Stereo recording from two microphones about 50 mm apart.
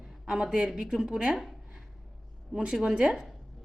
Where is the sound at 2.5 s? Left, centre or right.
Right.